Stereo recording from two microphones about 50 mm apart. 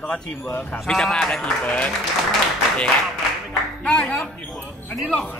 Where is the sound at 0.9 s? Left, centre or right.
Centre.